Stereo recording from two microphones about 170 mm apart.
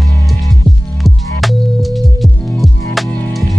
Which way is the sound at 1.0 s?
Centre (ahead or behind).